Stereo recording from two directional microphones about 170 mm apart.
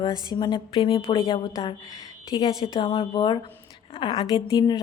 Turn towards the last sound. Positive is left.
turn(degrees=25)  # may be behind; listen again after turning